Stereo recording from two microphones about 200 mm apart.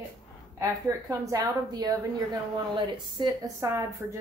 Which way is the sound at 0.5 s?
15° right (ahead or behind).